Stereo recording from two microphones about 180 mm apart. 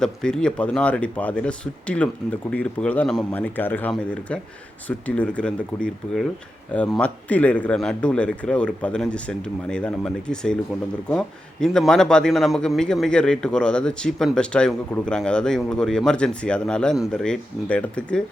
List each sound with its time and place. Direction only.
0.0 s a man's voice: 5° left (ahead or behind)